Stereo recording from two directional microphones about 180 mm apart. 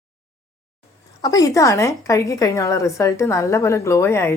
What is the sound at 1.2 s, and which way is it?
A woman's voice, 20° left (ahead or behind).